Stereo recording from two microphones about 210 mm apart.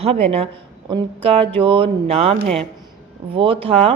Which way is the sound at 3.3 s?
25° right (ahead or behind).